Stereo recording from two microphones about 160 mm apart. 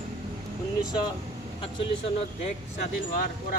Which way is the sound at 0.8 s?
25° left (ahead or behind).